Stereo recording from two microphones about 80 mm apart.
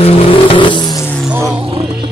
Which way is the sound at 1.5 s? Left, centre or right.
Right.